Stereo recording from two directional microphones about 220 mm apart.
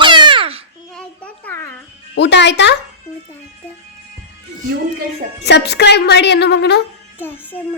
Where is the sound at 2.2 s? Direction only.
50° left (ahead or behind).